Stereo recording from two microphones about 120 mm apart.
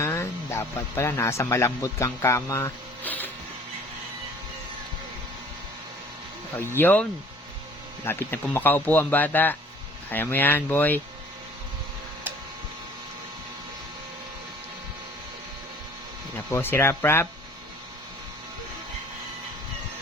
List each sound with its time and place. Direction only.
0.0 s speech: 25° left (ahead or behind)
3.0 s printer: 15° left (ahead or behind)
6.6 s speech: 20° left (ahead or behind)
16.5 s speech: 20° left (ahead or behind)